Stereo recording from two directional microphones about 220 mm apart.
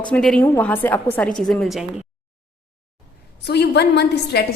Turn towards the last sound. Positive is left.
turn(degrees=50)  # may be behind; listen again after turning